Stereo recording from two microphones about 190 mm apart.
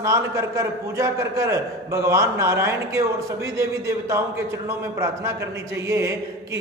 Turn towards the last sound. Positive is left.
turn(degrees=-15)  # may be behind; listen again after turning